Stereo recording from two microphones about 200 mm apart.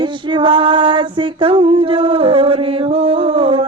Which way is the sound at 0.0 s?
25° right (ahead or behind).